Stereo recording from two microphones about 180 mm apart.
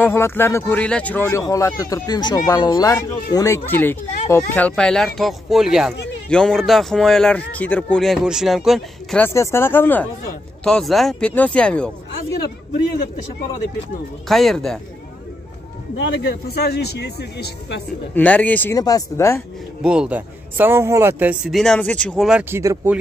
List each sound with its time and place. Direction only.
0.0 s a man's voice: 15° left (ahead or behind)
9.2 s a man's voice: 15° left (ahead or behind)
14.2 s a man's voice: centre (ahead or behind)
16.0 s speech: 75° left (ahead or behind)
18.1 s speech: 10° left (ahead or behind)
18.8 s speech: 20° left (ahead or behind)
19.8 s a man's voice: 5° right (ahead or behind)
22.4 s speech: 15° right (ahead or behind)